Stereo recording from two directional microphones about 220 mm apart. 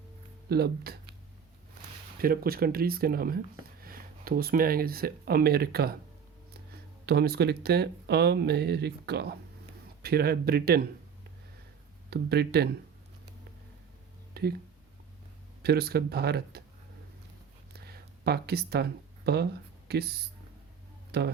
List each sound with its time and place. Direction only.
0.4 s speech: 45° right (ahead or behind)
2.1 s speech: 40° right (ahead or behind)
7.0 s speech: 45° right (ahead or behind)
12.1 s speech: 50° right (ahead or behind)
14.4 s speech: 45° right (ahead or behind)
15.6 s speech: 45° right (ahead or behind)
17.7 s a sound: 45° right (ahead or behind)
19.9 s speech: 45° right (ahead or behind)